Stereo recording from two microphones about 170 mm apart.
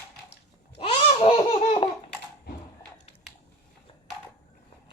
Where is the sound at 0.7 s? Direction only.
35° left (ahead or behind).